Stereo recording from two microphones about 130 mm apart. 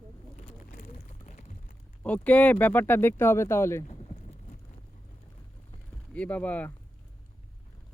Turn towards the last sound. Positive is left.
turn(degrees=10)  # may be behind; listen again after turning